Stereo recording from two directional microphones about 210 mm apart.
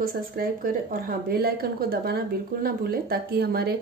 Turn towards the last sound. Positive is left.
turn(degrees=-45)  # may be behind; listen again after turning